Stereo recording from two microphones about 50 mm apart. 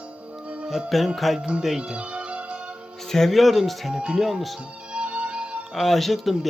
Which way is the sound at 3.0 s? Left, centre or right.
Centre.